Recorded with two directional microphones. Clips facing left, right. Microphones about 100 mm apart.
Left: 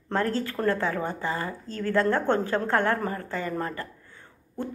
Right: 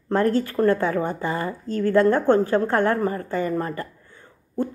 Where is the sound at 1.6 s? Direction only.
50° right (ahead or behind).